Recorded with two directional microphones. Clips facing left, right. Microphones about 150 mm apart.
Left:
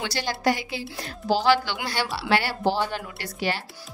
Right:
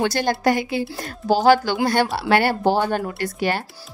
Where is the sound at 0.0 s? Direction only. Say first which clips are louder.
Right 6 dB; 50° right (ahead or behind).